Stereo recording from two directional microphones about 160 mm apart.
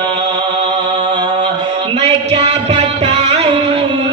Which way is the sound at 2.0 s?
40° right (ahead or behind).